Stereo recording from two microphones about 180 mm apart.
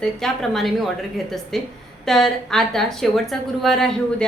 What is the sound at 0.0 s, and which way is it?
A woman's voice, centre (ahead or behind).